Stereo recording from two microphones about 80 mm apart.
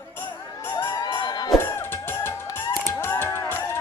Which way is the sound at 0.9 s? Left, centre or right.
Left.